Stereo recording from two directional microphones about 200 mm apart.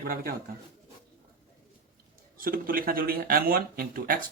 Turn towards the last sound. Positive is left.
turn(degrees=-45)  # may be behind; listen again after turning